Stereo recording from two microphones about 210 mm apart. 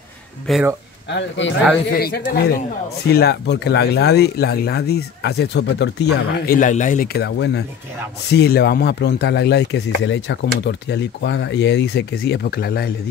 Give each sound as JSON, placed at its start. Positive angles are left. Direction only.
{"t": 0.5, "sound": "speech", "side_deg": 0}
{"t": 1.0, "sound": "speech", "side_deg": 60}
{"t": 1.9, "sound": "speech", "side_deg": 45}
{"t": 6.4, "sound": "speech", "side_deg": 40}